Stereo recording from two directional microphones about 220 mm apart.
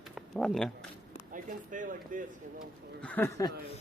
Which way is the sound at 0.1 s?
Centre (ahead or behind).